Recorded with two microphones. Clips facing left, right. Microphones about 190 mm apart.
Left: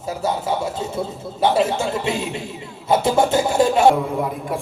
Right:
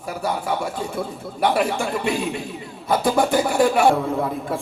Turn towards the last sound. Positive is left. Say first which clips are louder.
# even
turn(degrees=15)  # may be behind; listen again after turning